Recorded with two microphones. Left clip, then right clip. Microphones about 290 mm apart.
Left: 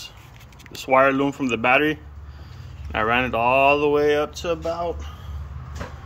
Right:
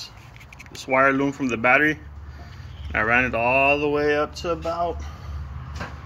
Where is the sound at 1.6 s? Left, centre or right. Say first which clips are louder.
Right 1 dB; left.